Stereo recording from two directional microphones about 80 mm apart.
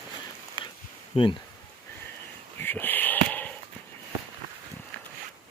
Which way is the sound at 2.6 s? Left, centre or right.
Left.